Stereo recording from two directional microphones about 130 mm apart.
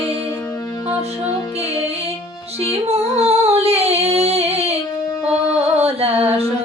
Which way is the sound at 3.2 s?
55° right (ahead or behind).